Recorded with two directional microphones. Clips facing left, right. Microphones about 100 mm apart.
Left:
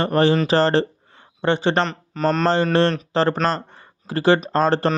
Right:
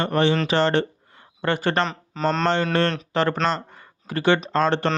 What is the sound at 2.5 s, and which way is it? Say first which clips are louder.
Speech: left 4 dB; 35° left (ahead or behind).